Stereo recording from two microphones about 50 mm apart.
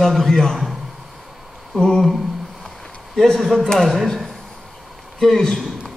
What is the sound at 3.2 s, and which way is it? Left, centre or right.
A man's voice, centre.